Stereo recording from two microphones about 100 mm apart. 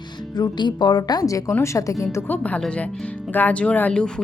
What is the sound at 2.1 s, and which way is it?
Speech, 15° left (ahead or behind).